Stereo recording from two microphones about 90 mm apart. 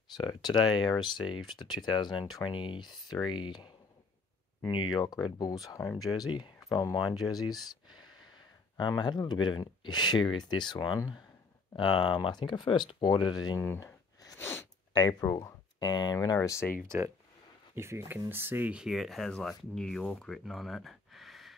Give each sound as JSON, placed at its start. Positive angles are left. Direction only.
{"t": 0.3, "sound": "speech", "side_deg": 50}
{"t": 2.5, "sound": "speech", "side_deg": 70}
{"t": 5.0, "sound": "speech", "side_deg": 45}
{"t": 6.1, "sound": "speech", "side_deg": 55}
{"t": 13.7, "sound": "a sound", "side_deg": 40}
{"t": 15.0, "sound": "speech", "side_deg": 50}
{"t": 16.3, "sound": "speech", "side_deg": 30}
{"t": 16.8, "sound": "speech", "side_deg": -30}
{"t": 18.8, "sound": "speech", "side_deg": -5}